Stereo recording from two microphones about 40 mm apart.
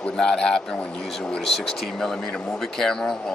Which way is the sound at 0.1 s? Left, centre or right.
Centre.